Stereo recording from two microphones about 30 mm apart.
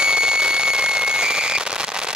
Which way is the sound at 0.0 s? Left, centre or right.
Right.